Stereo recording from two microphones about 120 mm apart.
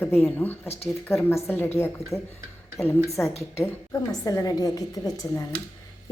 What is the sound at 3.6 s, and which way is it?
A woman's voice, 25° left (ahead or behind).